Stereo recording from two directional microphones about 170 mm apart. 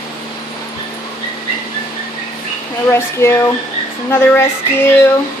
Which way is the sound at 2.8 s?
15° left (ahead or behind).